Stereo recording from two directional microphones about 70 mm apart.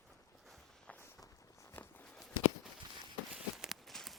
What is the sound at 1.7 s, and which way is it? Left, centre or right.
Walk, left.